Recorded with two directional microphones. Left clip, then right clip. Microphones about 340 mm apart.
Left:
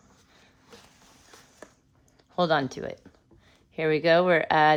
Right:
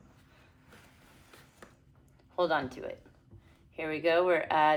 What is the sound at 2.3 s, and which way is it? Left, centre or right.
Speech, left.